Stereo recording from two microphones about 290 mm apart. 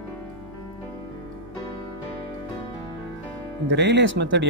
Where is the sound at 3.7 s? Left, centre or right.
Right.